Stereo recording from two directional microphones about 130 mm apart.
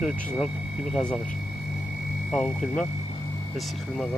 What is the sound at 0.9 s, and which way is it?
Speech, 5° left (ahead or behind).